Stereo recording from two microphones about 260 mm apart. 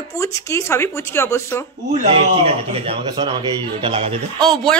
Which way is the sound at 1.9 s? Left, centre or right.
Right.